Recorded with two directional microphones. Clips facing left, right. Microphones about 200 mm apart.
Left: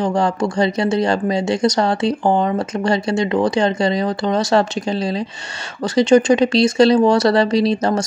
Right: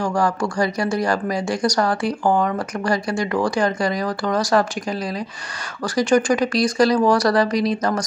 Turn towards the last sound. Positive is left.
turn(degrees=25)  # may be behind; listen again after turning